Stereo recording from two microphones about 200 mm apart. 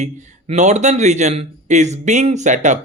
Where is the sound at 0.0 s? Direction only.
35° right (ahead or behind).